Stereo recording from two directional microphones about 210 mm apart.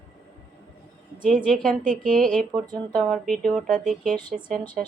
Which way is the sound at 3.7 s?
40° right (ahead or behind).